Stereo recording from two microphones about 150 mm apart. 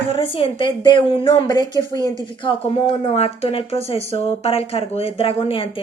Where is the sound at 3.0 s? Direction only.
45° left (ahead or behind).